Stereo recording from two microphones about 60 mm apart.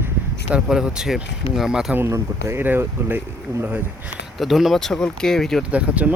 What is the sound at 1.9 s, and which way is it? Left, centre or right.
Speech, right.